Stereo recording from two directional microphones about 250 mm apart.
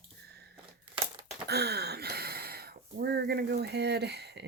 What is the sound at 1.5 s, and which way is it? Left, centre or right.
Speech, right.